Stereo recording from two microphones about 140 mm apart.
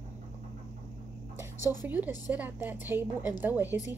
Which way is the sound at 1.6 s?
25° left (ahead or behind).